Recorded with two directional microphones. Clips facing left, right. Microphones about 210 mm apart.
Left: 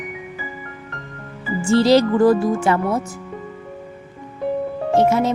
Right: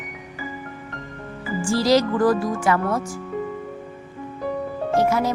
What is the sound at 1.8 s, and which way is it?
Speech, 25° left (ahead or behind).